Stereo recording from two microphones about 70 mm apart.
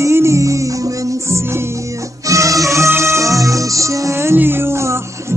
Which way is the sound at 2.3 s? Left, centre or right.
Right.